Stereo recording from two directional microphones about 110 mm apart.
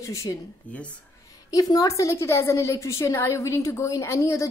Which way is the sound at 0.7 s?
15° left (ahead or behind).